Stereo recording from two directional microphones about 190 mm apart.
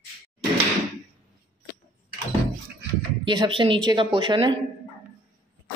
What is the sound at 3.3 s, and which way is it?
Speech, 25° right (ahead or behind).